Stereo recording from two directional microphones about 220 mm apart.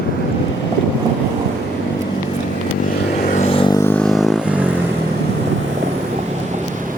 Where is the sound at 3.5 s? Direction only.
20° left (ahead or behind).